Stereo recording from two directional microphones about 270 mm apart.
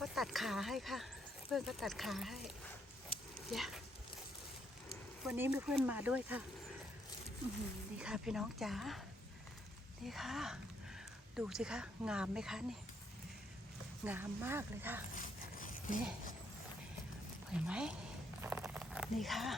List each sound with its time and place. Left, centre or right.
0.0 s a sound: centre
1.5 s speech: centre
3.5 s speech: centre
5.2 s speech: centre
7.9 s speech: centre
10.1 s speech: centre
14.0 s speech: centre
15.1 s zipper: left
17.5 s speech: centre
18.4 s a sound: centre